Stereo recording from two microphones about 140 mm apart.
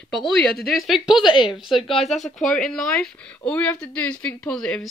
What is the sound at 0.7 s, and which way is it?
Speech, centre (ahead or behind).